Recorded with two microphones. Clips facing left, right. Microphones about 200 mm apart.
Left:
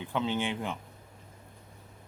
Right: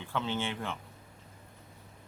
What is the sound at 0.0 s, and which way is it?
Speech, 15° left (ahead or behind).